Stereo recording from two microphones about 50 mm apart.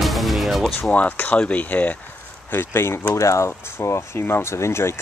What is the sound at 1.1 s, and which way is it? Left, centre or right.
Speech, left.